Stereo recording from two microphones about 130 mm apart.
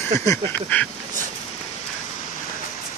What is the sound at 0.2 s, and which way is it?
Duck, 25° left (ahead or behind).